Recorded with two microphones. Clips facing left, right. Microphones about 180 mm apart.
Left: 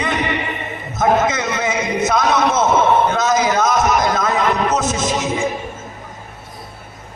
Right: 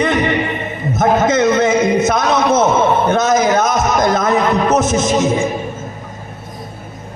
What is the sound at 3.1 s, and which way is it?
A man's voice, 20° right (ahead or behind).